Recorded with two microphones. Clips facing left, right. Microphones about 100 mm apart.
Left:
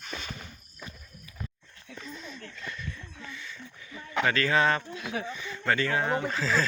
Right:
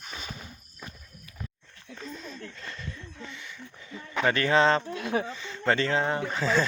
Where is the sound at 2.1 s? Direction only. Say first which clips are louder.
Right 2 dB; 40° right (ahead or behind).